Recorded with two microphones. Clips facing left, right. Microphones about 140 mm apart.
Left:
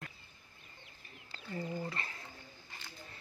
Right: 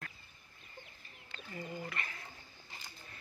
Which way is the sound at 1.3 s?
30° left (ahead or behind).